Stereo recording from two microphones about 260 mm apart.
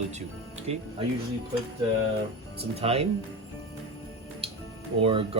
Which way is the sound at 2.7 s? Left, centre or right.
Right.